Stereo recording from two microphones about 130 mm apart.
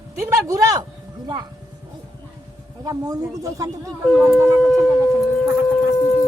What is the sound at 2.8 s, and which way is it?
Speech, 25° right (ahead or behind).